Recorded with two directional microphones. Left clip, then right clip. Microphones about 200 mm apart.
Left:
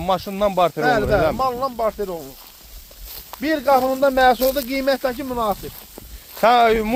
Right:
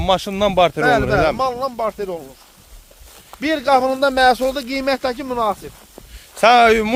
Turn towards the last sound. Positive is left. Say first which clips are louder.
# right 3 dB
turn(degrees=-35)  # may be behind; listen again after turning